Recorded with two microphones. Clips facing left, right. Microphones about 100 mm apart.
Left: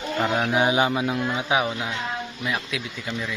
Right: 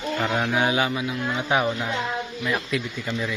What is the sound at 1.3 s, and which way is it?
Speech, 10° left (ahead or behind).